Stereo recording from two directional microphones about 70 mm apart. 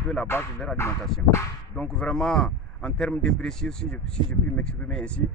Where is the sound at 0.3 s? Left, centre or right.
Left.